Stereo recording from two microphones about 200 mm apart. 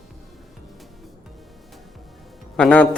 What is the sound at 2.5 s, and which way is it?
Speech, 5° left (ahead or behind).